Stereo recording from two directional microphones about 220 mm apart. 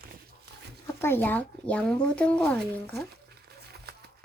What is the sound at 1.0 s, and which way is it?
Speech, 10° left (ahead or behind).